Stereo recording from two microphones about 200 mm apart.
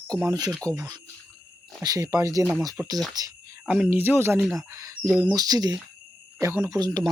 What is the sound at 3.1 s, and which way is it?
Insect, 20° right (ahead or behind).